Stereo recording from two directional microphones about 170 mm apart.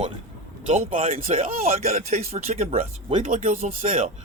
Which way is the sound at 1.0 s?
35° right (ahead or behind).